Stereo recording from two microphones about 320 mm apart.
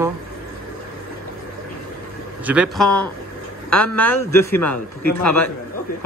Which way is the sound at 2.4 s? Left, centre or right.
Centre.